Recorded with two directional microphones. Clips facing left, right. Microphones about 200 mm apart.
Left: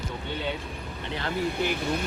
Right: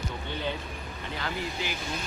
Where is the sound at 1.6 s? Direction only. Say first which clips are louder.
Left 7 dB; 60° left (ahead or behind).